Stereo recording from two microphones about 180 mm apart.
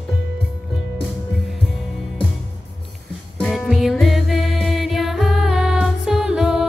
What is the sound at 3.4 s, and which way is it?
Music, centre (ahead or behind).